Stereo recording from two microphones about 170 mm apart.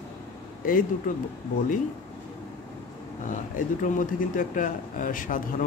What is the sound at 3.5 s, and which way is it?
Speech, 50° left (ahead or behind).